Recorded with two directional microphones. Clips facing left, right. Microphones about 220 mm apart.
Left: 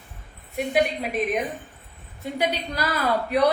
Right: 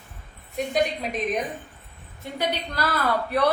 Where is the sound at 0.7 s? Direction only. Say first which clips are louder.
Left 2 dB; 10° left (ahead or behind).